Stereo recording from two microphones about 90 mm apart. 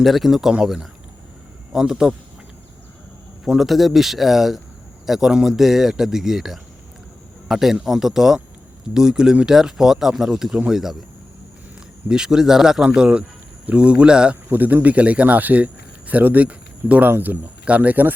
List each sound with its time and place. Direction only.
0.0 s speech: centre (ahead or behind)
3.4 s speech: 5° right (ahead or behind)
12.0 s speech: 10° right (ahead or behind)